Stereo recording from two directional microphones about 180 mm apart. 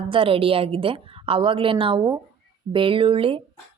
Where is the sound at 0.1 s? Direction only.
30° right (ahead or behind).